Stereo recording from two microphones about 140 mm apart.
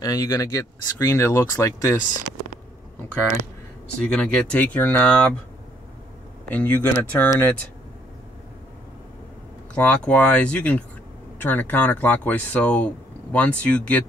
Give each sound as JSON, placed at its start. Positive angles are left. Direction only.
{"t": 0.0, "sound": "speech", "side_deg": 25}
{"t": 4.0, "sound": "speech", "side_deg": 10}
{"t": 6.5, "sound": "speech", "side_deg": 10}
{"t": 9.8, "sound": "speech", "side_deg": 10}